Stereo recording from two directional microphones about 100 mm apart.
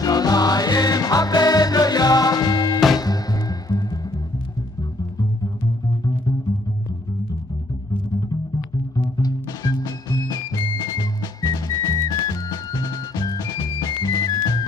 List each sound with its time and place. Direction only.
0.0 s music: 40° left (ahead or behind)
8.9 s music: 40° left (ahead or behind)